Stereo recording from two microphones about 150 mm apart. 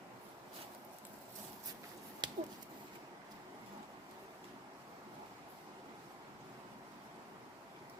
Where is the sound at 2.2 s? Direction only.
30° right (ahead or behind).